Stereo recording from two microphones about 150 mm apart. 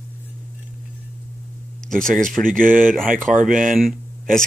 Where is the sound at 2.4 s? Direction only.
65° right (ahead or behind).